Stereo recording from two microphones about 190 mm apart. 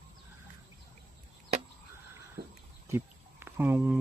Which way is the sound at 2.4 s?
50° right (ahead or behind).